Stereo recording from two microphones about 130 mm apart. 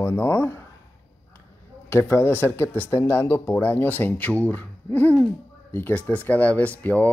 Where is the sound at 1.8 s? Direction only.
20° left (ahead or behind).